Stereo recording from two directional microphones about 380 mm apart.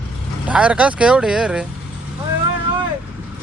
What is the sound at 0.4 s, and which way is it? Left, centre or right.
Speech, centre.